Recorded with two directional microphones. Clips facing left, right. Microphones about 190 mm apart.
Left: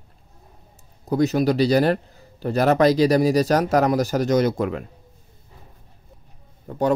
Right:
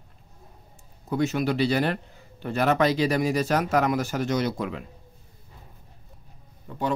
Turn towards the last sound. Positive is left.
turn(degrees=45)  # may be behind; listen again after turning